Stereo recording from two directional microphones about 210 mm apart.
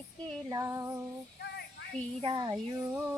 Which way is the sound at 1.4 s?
50° left (ahead or behind).